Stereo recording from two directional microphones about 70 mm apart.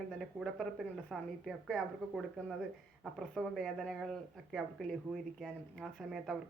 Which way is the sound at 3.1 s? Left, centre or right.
Centre.